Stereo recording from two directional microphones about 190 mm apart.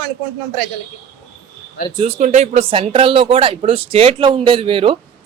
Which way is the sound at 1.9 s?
35° right (ahead or behind).